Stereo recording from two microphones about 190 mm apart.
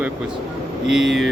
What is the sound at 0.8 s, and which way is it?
Speech, centre (ahead or behind).